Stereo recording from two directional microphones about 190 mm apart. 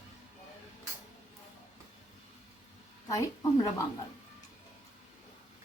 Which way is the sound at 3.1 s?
20° left (ahead or behind).